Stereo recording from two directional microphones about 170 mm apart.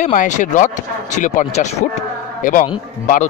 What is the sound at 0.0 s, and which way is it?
Speech, 50° left (ahead or behind).